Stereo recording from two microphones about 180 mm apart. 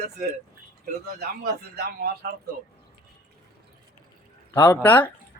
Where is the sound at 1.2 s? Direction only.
60° right (ahead or behind).